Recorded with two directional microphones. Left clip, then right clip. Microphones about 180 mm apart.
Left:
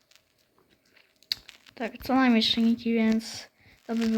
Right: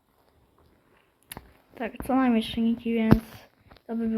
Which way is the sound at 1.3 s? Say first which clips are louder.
Left 11 dB; 5° left (ahead or behind).